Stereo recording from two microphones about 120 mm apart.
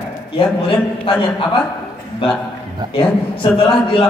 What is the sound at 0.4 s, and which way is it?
Speech, 50° left (ahead or behind).